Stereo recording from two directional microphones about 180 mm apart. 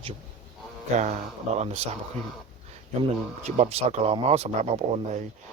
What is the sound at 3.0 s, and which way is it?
Speech, 35° right (ahead or behind).